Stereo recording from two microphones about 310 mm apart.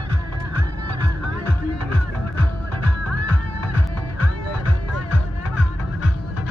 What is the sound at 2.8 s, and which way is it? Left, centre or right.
Music, right.